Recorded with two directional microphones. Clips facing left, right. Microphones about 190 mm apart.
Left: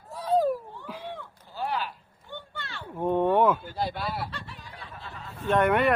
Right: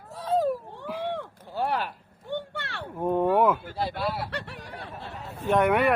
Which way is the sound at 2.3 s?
80° right.